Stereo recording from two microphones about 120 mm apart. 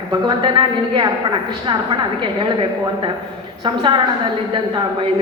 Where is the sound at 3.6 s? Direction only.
40° right (ahead or behind).